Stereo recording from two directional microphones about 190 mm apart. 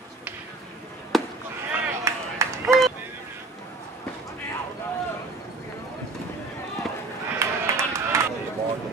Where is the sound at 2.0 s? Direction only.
15° right (ahead or behind).